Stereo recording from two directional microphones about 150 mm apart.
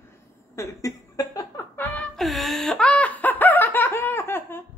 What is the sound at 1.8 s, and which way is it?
Fowl, 5° left (ahead or behind).